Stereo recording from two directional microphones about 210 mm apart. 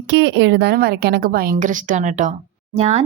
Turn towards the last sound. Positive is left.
turn(degrees=-30)  # may be behind; listen again after turning